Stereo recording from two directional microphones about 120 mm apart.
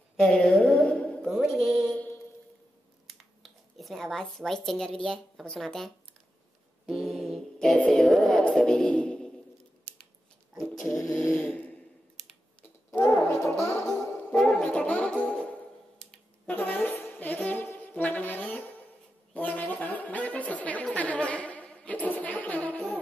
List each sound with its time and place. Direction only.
0.2 s a sound: 10° left (ahead or behind)
1.2 s music: 5° right (ahead or behind)
2.0 s mantra: 15° left (ahead or behind)
3.1 s speech: centre (ahead or behind)
6.9 s music: centre (ahead or behind)
10.5 s a sound: centre (ahead or behind)
12.9 s music: 15° left (ahead or behind)
13.3 s music: 5° left (ahead or behind)
19.3 s a sound: 10° left (ahead or behind)